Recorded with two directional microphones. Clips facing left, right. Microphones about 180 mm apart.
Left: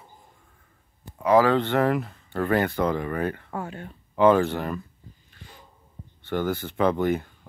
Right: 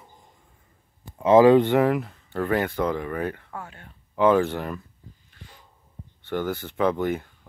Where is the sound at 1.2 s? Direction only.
20° right (ahead or behind); by 3.4 s 5° right (ahead or behind).